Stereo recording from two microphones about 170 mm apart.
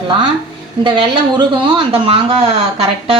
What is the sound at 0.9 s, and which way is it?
Speech, 30° right (ahead or behind).